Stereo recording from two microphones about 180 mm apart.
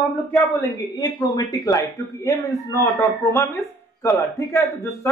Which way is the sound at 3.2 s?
20° left (ahead or behind).